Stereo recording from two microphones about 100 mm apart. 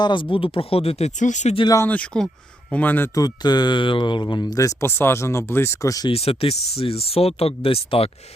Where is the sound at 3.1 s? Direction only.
40° left (ahead or behind).